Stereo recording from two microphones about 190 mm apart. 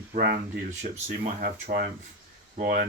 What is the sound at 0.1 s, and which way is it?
Speech, 50° right (ahead or behind).